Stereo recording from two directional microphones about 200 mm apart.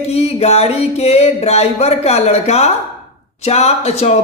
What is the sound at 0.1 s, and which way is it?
Music, 30° left (ahead or behind).